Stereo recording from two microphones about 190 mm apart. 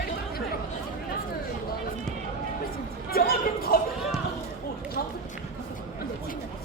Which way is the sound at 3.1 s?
55° left (ahead or behind).